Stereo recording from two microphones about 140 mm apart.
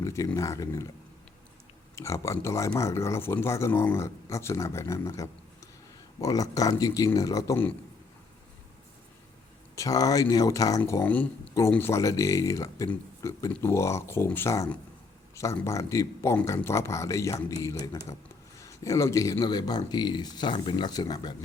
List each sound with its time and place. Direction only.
0.0 s speech: 20° left (ahead or behind)
2.0 s speech: 20° left (ahead or behind)
9.7 s speech: 25° left (ahead or behind)
11.0 s speech: 10° left (ahead or behind); by 21.3 s 30° left (ahead or behind)